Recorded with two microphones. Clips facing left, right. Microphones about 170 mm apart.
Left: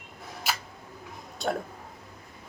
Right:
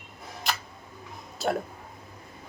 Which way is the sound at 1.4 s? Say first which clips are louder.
Right 2 dB; centre (ahead or behind).